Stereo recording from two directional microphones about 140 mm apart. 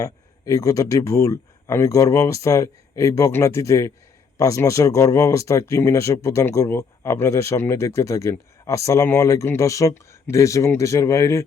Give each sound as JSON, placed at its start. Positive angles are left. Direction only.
{"t": 0.0, "sound": "speech", "side_deg": 25}